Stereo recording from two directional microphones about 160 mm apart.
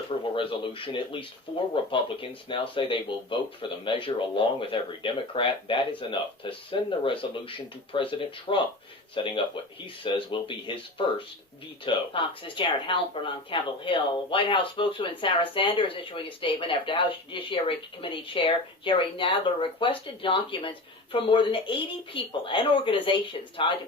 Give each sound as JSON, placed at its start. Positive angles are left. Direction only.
{"t": 0.3, "sound": "speech", "side_deg": 30}